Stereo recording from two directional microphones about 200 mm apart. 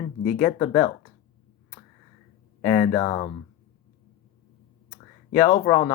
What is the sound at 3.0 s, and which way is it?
Speech, 30° left (ahead or behind).